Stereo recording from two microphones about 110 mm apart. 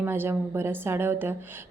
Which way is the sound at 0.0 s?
20° right (ahead or behind).